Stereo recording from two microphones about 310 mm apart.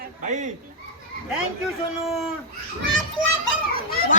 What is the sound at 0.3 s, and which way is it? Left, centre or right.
Speech, right.